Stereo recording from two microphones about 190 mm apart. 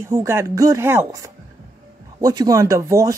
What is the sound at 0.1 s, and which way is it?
Speech, 15° right (ahead or behind).